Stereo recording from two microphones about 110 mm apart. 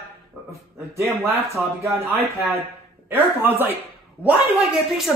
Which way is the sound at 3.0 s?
20° right (ahead or behind).